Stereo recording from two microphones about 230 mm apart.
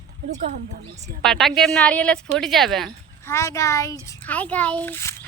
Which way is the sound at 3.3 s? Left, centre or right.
Centre.